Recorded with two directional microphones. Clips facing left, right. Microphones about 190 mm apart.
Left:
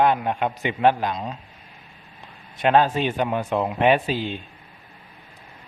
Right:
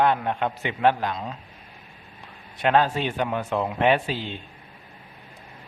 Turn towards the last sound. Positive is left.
turn(degrees=15)  # may be behind; listen again after turning